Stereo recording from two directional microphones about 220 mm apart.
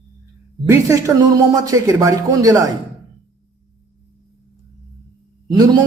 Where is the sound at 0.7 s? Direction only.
15° right (ahead or behind).